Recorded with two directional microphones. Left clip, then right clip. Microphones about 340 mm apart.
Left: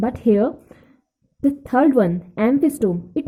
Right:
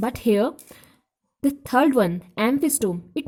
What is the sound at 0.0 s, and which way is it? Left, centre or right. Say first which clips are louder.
A woman's voice: left 3 dB; right.